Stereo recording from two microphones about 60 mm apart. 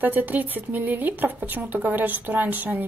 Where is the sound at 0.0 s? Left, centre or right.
Right.